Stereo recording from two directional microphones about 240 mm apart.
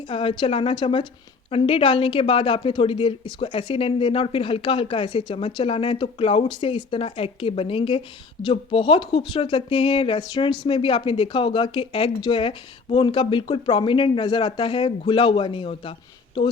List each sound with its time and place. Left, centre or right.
0.1 s speech: left